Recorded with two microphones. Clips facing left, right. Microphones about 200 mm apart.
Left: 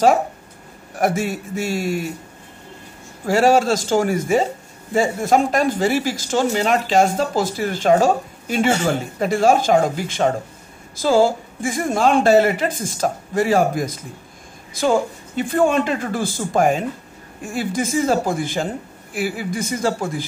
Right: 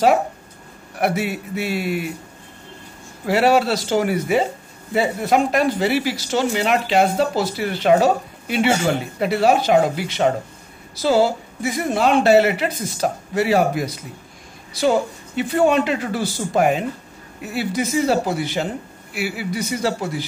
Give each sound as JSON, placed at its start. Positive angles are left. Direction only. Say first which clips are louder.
{"t": 0.9, "sound": "speech", "louder": "left 1 dB", "side_deg": 45}
{"t": 3.3, "sound": "speech", "louder": "left 1 dB", "side_deg": 45}